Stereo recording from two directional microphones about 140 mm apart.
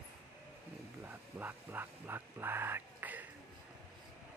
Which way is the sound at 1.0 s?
15° right (ahead or behind).